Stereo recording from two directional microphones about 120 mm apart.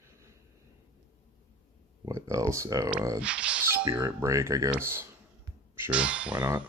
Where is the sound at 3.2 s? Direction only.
10° right (ahead or behind).